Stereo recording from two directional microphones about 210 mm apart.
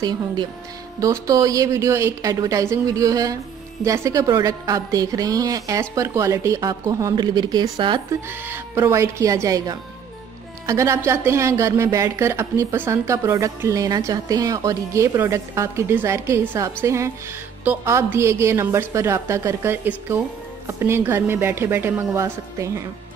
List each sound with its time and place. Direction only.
0.9 s a woman's voice: 15° right (ahead or behind)